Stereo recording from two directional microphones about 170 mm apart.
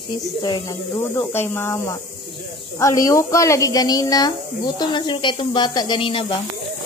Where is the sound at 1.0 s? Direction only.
15° left (ahead or behind); by 6.2 s 30° left (ahead or behind).